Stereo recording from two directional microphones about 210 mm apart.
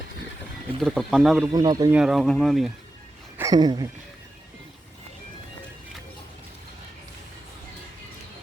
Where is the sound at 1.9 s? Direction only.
5° right (ahead or behind).